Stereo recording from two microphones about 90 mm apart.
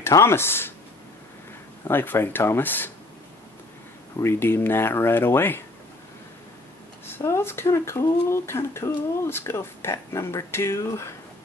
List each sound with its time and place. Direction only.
0.0 s speech: 30° left (ahead or behind)
1.9 s speech: 25° left (ahead or behind)
4.2 s speech: 30° left (ahead or behind)
7.1 s speech: 25° left (ahead or behind)